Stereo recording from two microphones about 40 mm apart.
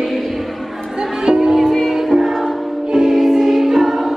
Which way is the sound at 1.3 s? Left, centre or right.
Centre.